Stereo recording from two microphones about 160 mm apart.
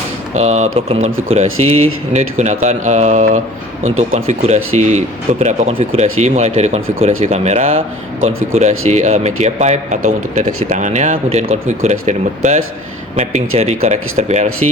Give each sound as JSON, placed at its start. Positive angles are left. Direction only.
{"t": 0.3, "sound": "speech", "side_deg": -45}